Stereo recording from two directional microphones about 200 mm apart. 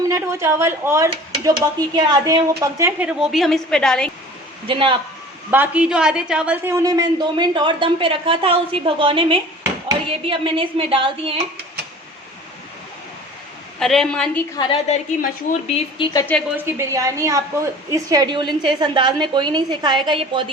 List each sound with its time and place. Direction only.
0.1 s speech: 15° right (ahead or behind); by 4.1 s 5° left (ahead or behind)
4.7 s a woman's voice: 25° right (ahead or behind)
5.5 s a woman's voice: 10° right (ahead or behind); by 11.3 s 25° right (ahead or behind)
13.7 s a woman's voice: centre (ahead or behind)
14.6 s a woman's voice: 25° left (ahead or behind)
16.1 s a woman's voice: 10° left (ahead or behind)
16.6 s a woman's voice: 15° right (ahead or behind)